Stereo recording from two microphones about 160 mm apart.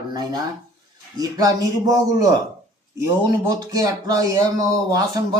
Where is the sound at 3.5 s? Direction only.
25° right (ahead or behind).